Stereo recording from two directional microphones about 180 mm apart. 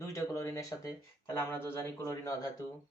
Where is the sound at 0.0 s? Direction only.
15° left (ahead or behind).